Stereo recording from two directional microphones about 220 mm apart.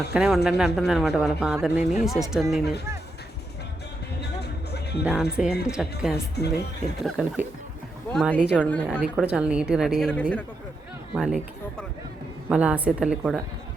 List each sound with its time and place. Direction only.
0.1 s a man's voice: 5° right (ahead or behind)
4.2 s music: 50° left (ahead or behind)
5.0 s a man's voice: 5° right (ahead or behind)
8.6 s a woman's voice: 5° left (ahead or behind)
9.0 s a man's voice: 5° right (ahead or behind)
12.5 s a man's voice: 5° right (ahead or behind)